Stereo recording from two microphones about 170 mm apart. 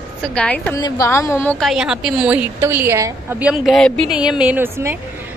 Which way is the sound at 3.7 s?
5° left (ahead or behind).